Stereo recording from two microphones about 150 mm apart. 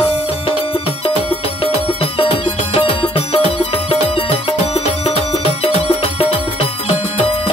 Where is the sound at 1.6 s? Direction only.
40° left (ahead or behind).